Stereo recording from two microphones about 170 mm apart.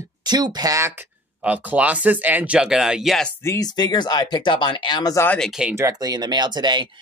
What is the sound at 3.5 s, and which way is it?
Speech, 20° left (ahead or behind).